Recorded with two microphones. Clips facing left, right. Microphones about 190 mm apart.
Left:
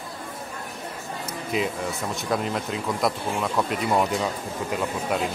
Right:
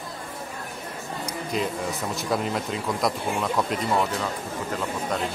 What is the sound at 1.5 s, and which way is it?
Speech, 5° left (ahead or behind).